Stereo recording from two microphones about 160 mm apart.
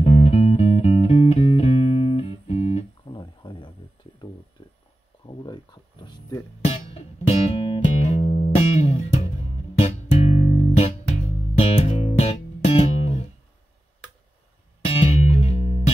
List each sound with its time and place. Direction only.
0.0 s music: 40° left (ahead or behind)
5.2 s a sound: 25° left (ahead or behind)
6.6 s music: 40° left (ahead or behind)
14.8 s music: 35° left (ahead or behind)